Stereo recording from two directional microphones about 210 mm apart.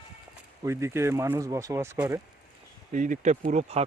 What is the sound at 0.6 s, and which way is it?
Speech, 15° right (ahead or behind).